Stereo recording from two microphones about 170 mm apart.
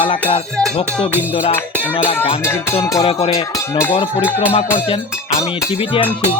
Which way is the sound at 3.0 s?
35° left (ahead or behind).